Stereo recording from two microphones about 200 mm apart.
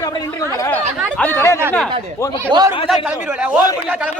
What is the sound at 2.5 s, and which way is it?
Speech, 25° right (ahead or behind).